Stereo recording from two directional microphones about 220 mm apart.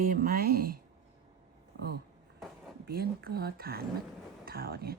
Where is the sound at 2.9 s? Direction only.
45° right (ahead or behind).